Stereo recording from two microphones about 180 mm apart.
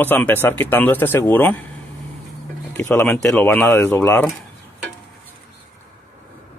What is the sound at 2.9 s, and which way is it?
Speech, 10° left (ahead or behind).